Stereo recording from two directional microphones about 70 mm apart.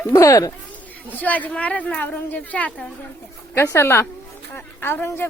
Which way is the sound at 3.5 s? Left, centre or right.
Left.